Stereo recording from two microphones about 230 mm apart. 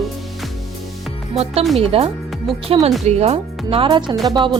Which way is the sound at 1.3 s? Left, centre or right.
Right.